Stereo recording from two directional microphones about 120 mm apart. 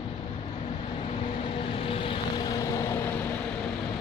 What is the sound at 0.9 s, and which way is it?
Vehicle, 55° left (ahead or behind).